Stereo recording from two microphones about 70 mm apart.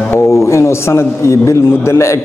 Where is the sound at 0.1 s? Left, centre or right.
Left.